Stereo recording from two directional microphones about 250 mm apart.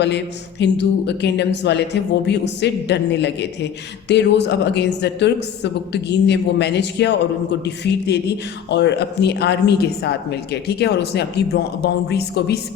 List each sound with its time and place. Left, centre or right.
0.6 s a woman's voice: left